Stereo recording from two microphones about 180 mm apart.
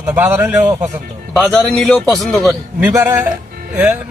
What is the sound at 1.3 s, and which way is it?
A man's voice, centre (ahead or behind).